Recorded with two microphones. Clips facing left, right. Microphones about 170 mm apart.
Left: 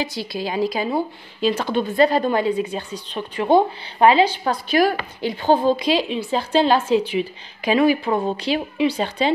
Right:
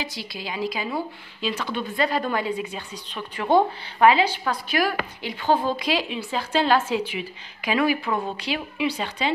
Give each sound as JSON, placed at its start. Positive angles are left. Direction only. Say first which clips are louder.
{"t": 0.3, "sound": "speech", "louder": "left 6 dB", "side_deg": 35}